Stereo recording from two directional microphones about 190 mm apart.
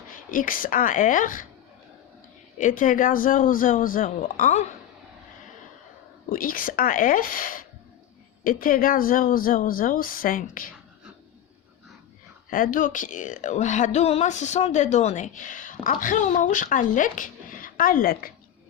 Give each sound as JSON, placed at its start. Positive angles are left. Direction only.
{"t": 0.3, "sound": "speech", "side_deg": 45}
{"t": 2.6, "sound": "speech", "side_deg": 45}
{"t": 6.2, "sound": "speech", "side_deg": 45}
{"t": 12.5, "sound": "speech", "side_deg": 45}